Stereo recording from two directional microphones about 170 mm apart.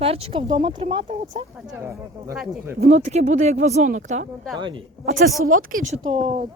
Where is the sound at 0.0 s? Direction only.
35° right (ahead or behind).